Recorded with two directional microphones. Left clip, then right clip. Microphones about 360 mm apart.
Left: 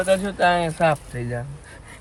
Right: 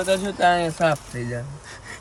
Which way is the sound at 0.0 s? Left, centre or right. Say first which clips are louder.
Left 1 dB; centre.